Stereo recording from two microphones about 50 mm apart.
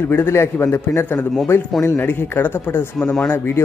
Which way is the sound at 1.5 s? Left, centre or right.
Left.